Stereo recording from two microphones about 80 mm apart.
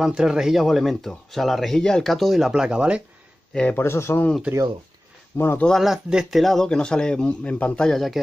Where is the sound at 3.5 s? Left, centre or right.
Centre.